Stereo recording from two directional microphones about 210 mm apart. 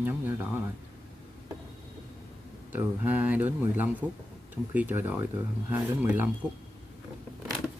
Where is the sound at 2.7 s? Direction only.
10° right (ahead or behind).